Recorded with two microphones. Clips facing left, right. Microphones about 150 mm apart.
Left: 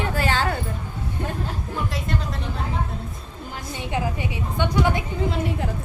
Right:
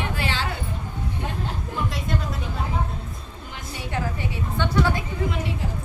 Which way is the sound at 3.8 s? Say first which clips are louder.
Left 2 dB; 15° left (ahead or behind).